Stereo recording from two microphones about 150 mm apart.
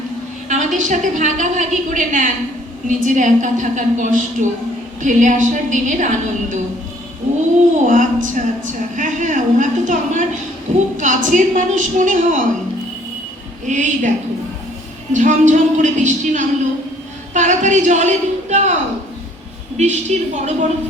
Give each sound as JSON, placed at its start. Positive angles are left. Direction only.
{"t": 0.4, "sound": "a woman's voice", "side_deg": -60}
{"t": 7.9, "sound": "a woman's voice", "side_deg": -60}
{"t": 13.7, "sound": "a woman's voice", "side_deg": -55}
{"t": 15.1, "sound": "a woman's voice", "side_deg": -55}
{"t": 19.7, "sound": "a woman's voice", "side_deg": -50}